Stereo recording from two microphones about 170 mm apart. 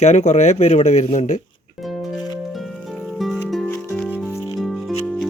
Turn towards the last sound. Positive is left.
turn(degrees=5)  # may be behind; listen again after turning